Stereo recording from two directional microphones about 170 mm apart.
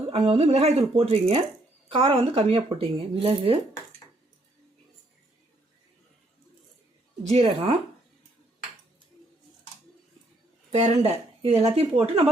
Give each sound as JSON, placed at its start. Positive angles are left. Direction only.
{"t": 0.1, "sound": "speech", "side_deg": -35}
{"t": 7.3, "sound": "speech", "side_deg": -35}
{"t": 10.7, "sound": "speech", "side_deg": -40}